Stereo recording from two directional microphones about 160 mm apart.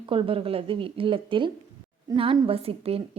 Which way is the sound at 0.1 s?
35° right (ahead or behind).